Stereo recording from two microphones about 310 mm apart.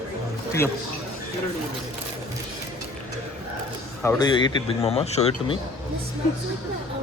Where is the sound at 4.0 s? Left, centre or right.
Centre.